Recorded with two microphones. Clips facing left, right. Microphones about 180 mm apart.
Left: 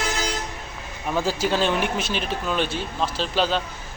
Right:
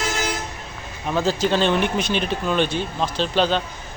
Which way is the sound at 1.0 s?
10° left (ahead or behind).